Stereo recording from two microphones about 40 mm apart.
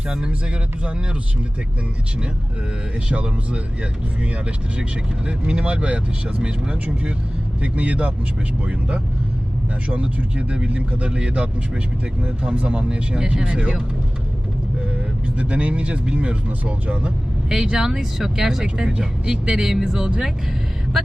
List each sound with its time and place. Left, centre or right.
0.1 s speech: centre
3.1 s speech: right
4.8 s speech: right
9.9 s speech: right
15.4 s speech: right
17.5 s speech: centre